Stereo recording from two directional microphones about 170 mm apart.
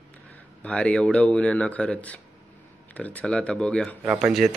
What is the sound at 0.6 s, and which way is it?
Speech, 5° left (ahead or behind).